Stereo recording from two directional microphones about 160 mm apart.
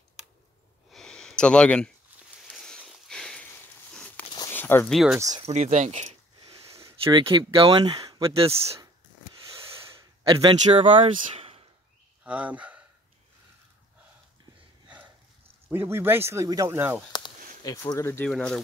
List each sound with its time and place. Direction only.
0.9 s a sound: 5° left (ahead or behind)
2.5 s sniff: 5° left (ahead or behind)
4.5 s a sound: 15° left (ahead or behind)
4.9 s speech: 5° right (ahead or behind)
5.3 s speech: 45° right (ahead or behind)
7.0 s speech: 30° right (ahead or behind)
8.3 s a man's voice: 40° right (ahead or behind)
10.2 s a man's voice: 35° right (ahead or behind)
11.3 s a sound: 35° right (ahead or behind)
12.3 s speech: 10° right (ahead or behind)
15.7 s speech: 15° right (ahead or behind)
17.6 s speech: 20° left (ahead or behind)
18.3 s speech: 5° left (ahead or behind)